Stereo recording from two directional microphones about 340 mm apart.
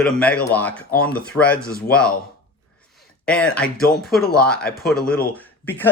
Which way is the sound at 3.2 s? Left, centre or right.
Centre.